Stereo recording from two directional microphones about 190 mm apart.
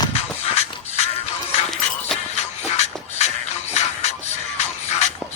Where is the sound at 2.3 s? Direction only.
35° left (ahead or behind).